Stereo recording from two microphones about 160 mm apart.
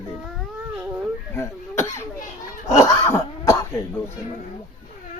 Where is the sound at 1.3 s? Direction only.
15° left (ahead or behind).